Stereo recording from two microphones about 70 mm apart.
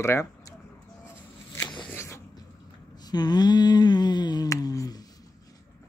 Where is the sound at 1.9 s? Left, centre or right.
Left.